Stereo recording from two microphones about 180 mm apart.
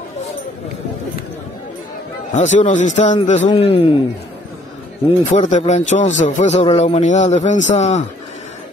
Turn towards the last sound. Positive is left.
turn(degrees=40)  # may be behind; listen again after turning